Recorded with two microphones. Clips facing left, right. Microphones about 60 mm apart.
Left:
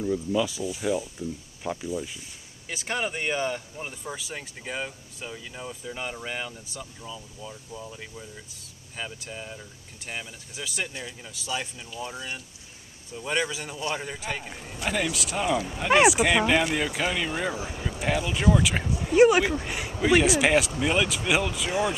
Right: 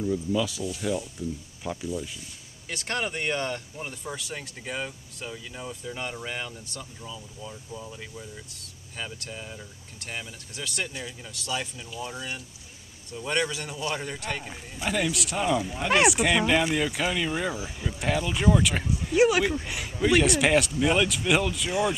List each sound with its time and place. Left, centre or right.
0.0 s speech: centre
19.5 s speech: centre
20.0 s speech: centre